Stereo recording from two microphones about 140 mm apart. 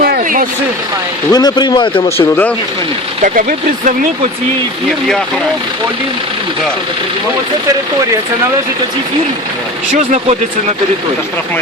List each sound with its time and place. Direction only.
0.0 s vehicle: 80° right
1.3 s speech: 30° left (ahead or behind)
2.1 s speech: 15° left (ahead or behind)
3.8 s speech: 60° right (ahead or behind)